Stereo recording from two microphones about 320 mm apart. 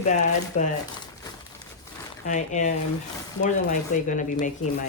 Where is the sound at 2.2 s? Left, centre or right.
Left.